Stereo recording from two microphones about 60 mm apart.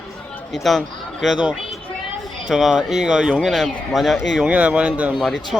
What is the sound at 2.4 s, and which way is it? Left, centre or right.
Speech, centre.